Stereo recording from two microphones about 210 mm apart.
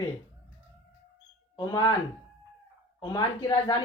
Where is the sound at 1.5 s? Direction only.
20° left (ahead or behind).